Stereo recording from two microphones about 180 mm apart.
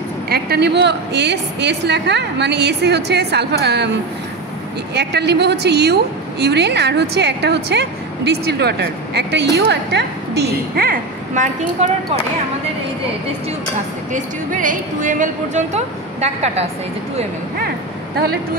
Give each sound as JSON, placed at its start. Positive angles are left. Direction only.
{"t": 0.3, "sound": "a woman's voice", "side_deg": -60}
{"t": 4.9, "sound": "a woman's voice", "side_deg": -70}
{"t": 14.1, "sound": "speech", "side_deg": -45}